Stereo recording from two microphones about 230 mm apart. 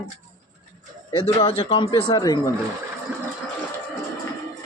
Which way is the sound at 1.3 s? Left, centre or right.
Left.